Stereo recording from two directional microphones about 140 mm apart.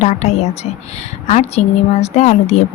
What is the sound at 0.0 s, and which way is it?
Speech, 55° left (ahead or behind).